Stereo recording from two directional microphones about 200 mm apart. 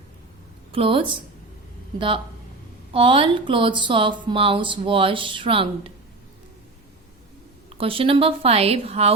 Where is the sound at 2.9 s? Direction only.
25° right (ahead or behind).